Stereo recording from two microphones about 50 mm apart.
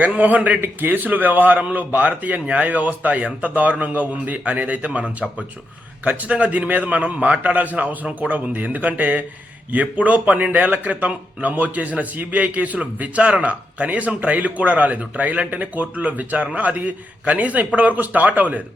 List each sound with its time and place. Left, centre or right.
0.0 s a man's voice: right
0.6 s a man's voice: right
6.1 s a man's voice: right